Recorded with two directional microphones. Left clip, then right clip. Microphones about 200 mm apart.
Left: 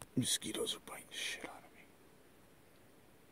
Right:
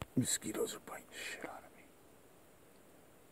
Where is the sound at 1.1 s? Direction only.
Centre (ahead or behind).